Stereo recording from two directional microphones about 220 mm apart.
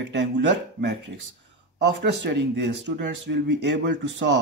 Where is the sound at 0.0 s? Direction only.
55° right (ahead or behind).